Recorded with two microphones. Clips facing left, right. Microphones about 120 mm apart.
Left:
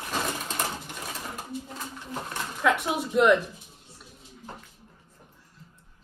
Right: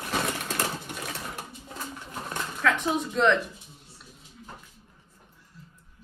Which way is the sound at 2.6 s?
10° left (ahead or behind).